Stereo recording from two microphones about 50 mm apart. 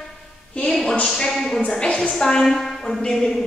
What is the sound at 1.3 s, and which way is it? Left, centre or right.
Speech, centre.